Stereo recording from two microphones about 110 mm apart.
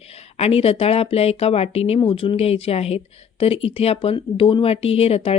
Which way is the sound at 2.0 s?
55° left (ahead or behind).